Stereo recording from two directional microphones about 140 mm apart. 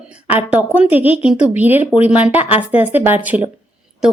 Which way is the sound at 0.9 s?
45° left (ahead or behind).